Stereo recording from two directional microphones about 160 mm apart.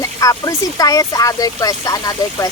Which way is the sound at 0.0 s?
20° left (ahead or behind).